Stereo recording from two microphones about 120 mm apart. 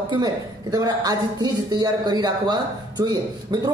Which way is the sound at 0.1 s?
35° right (ahead or behind).